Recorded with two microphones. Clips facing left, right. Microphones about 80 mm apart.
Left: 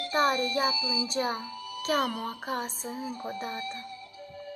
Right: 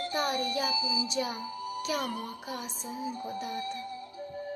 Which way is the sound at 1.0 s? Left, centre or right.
Left.